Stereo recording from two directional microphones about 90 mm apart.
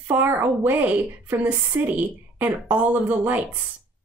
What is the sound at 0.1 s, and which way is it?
Speech, 20° right (ahead or behind).